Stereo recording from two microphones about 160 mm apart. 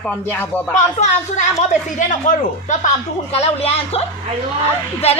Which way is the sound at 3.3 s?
40° left (ahead or behind).